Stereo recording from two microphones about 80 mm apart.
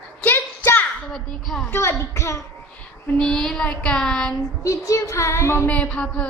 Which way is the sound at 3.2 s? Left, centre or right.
Centre.